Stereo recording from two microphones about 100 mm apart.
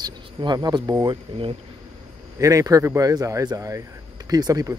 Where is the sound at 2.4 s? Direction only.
35° right (ahead or behind).